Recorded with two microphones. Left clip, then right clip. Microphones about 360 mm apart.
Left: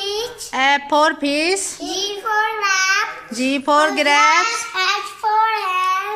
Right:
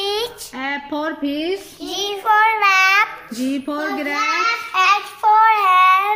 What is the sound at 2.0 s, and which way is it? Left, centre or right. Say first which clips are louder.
Child singing: right 5 dB; centre.